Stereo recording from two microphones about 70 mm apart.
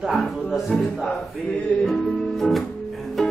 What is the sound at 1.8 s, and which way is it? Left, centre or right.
Music, centre.